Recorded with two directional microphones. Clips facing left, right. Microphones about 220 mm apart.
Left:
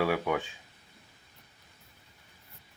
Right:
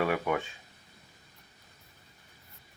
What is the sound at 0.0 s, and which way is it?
Speech, centre (ahead or behind).